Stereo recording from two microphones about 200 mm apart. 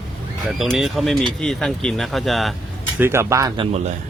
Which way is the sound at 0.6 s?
Centre (ahead or behind).